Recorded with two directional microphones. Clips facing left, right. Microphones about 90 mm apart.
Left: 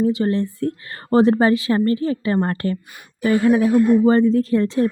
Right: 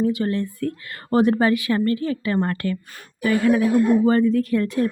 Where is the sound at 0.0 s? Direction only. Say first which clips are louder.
Left 3 dB; 25° left (ahead or behind).